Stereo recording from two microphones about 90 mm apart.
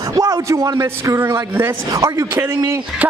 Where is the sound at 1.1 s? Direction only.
30° right (ahead or behind).